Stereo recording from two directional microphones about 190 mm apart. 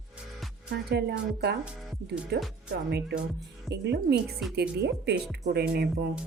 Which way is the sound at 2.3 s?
60° right (ahead or behind).